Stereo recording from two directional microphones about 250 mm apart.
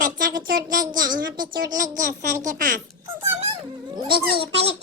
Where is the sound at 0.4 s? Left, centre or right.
Right.